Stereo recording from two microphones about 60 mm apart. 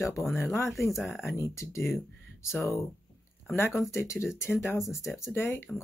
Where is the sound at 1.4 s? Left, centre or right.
Left.